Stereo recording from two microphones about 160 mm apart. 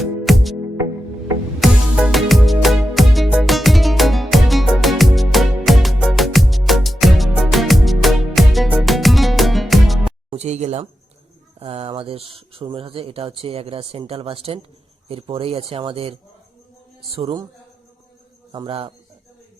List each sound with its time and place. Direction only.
0.0 s music: centre (ahead or behind)
1.5 s music: 5° right (ahead or behind)
10.2 s music: 45° right (ahead or behind)
11.6 s speech: 35° right (ahead or behind)
18.5 s speech: 30° right (ahead or behind)